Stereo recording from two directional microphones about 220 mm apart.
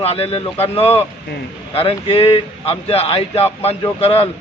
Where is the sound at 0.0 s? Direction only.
25° left (ahead or behind).